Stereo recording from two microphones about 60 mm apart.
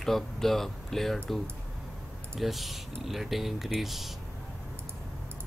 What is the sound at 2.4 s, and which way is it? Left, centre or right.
Speech, centre.